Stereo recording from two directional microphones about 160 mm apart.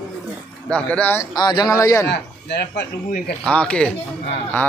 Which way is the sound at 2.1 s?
90° left.